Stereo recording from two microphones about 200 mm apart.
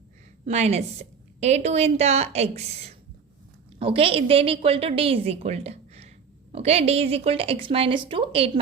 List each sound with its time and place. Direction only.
0.4 s a woman's voice: 35° right (ahead or behind)